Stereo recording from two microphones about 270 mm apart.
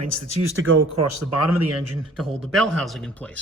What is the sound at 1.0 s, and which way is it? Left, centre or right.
Speech, right.